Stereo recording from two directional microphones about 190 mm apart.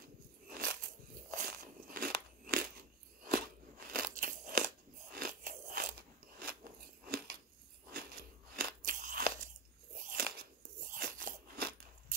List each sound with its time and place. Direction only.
0.5 s biting: 50° right (ahead or behind)
3.3 s crunch: 50° right (ahead or behind)
4.1 s a sound: 45° right (ahead or behind)
5.1 s biting: 45° right (ahead or behind)
6.4 s crunch: 50° right (ahead or behind)